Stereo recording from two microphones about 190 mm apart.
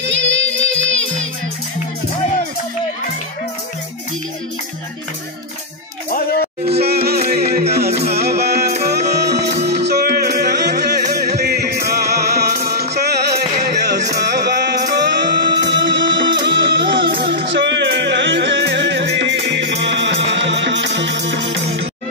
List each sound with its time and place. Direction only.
0.0 s music: 75° right (ahead or behind); by 1.2 s 90° right
6.8 s music: 55° right (ahead or behind)
17.1 s music: 55° right (ahead or behind)